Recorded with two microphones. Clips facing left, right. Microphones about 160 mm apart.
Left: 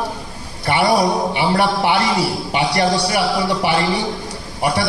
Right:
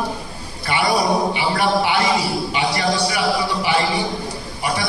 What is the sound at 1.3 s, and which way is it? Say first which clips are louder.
A man's voice: left 2 dB; 60° left (ahead or behind).